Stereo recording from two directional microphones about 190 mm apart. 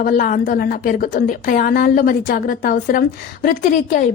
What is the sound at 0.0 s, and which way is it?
A woman's voice, 45° left (ahead or behind).